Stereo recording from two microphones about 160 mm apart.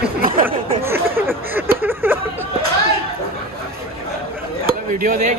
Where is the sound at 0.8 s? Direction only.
15° right (ahead or behind).